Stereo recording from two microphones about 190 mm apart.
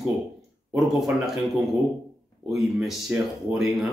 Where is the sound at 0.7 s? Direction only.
Centre (ahead or behind).